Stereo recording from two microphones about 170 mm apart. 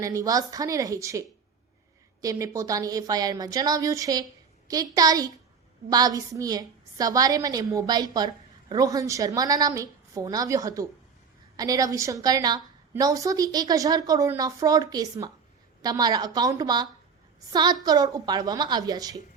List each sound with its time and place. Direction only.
0.0 s a woman's voice: 20° right (ahead or behind)
2.2 s a woman's voice: 20° right (ahead or behind)